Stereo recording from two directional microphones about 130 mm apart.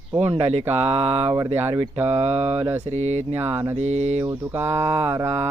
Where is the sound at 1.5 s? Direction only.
55° right (ahead or behind).